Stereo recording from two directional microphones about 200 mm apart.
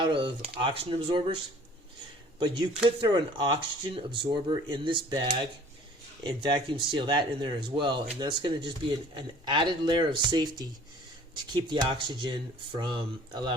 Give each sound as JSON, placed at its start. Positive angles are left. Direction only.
{"t": 0.0, "sound": "speech", "side_deg": -25}
{"t": 2.4, "sound": "speech", "side_deg": -25}
{"t": 11.5, "sound": "speech", "side_deg": -20}